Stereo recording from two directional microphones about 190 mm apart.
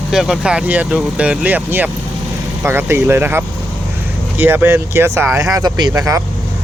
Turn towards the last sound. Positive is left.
turn(degrees=-15)  # may be behind; listen again after turning